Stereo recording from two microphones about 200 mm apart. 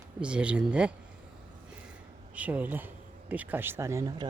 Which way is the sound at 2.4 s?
5° right (ahead or behind).